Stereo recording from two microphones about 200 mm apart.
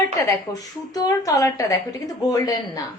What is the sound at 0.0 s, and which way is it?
A woman's voice, 15° left (ahead or behind).